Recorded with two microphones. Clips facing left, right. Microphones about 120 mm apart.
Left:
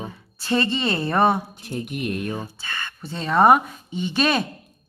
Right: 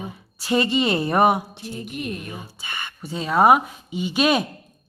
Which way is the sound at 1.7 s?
60° left (ahead or behind).